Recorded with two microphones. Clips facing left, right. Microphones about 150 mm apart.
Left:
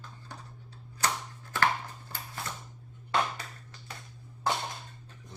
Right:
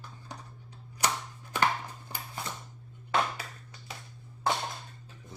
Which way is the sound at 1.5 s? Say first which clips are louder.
Even; 15° right (ahead or behind).